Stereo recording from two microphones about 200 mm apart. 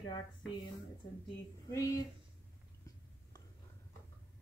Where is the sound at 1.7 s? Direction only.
15° left (ahead or behind).